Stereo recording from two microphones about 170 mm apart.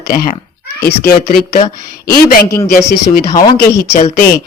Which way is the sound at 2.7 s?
60° left (ahead or behind).